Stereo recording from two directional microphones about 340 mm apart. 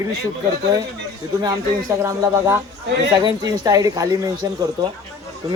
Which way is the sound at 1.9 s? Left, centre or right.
Centre.